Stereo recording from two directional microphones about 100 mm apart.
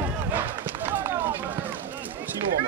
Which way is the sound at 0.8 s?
20° right (ahead or behind).